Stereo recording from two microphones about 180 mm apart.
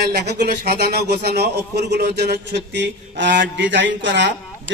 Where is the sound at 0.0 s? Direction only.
65° right (ahead or behind).